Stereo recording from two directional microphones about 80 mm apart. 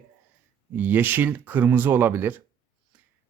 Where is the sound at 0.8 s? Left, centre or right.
Right.